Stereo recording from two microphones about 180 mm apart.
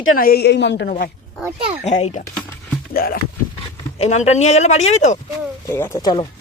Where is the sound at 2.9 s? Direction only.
55° left (ahead or behind).